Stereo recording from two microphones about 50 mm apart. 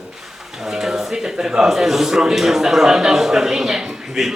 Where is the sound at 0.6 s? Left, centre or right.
Centre.